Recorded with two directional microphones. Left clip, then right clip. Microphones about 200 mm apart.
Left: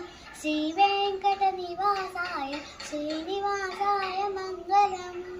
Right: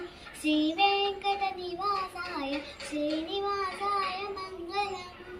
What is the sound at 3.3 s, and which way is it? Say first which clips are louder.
Child singing: left 2 dB; 15° left (ahead or behind).